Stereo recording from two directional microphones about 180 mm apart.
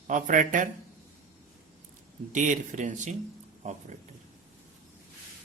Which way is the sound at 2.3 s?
45° right (ahead or behind).